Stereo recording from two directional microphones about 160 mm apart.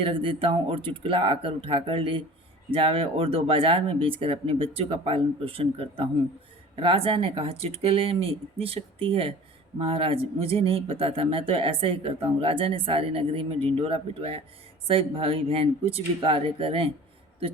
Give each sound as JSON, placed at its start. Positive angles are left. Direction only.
{"t": 0.0, "sound": "speech", "side_deg": -35}